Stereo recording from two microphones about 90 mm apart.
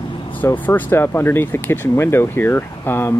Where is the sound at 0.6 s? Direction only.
20° left (ahead or behind).